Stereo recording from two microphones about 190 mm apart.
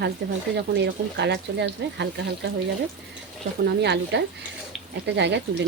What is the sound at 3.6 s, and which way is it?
Speech, 65° right (ahead or behind).